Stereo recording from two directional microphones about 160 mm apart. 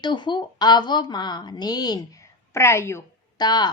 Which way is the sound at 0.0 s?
30° left (ahead or behind).